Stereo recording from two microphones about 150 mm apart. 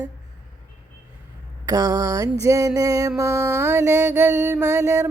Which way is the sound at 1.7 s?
25° right (ahead or behind).